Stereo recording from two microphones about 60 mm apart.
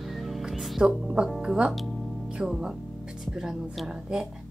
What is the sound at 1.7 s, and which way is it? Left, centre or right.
Speech, centre.